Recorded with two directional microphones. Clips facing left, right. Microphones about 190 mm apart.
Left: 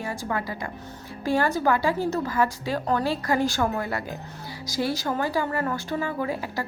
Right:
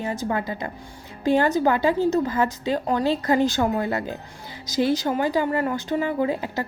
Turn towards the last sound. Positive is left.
turn(degrees=-20)  # may be behind; listen again after turning